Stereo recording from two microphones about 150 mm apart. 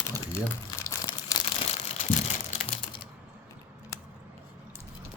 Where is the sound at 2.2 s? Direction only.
40° left (ahead or behind).